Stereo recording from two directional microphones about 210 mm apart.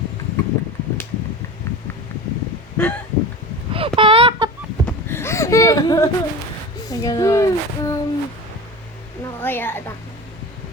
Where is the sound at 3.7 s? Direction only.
25° right (ahead or behind).